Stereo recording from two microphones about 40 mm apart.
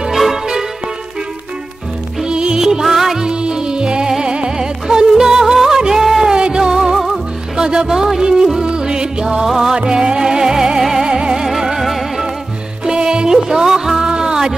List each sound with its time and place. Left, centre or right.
0.1 s music: centre
2.2 s music: right
2.6 s music: centre
3.3 s music: right
6.3 s music: centre
11.4 s music: centre
12.8 s music: centre